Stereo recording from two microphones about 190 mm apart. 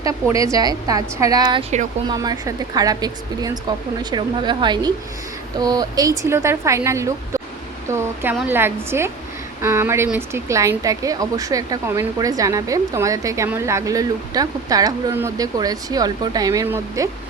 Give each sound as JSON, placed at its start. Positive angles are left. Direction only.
{"t": 0.0, "sound": "a woman's voice", "side_deg": -15}